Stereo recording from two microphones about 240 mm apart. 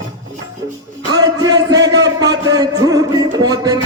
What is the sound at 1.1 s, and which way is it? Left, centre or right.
Music, centre.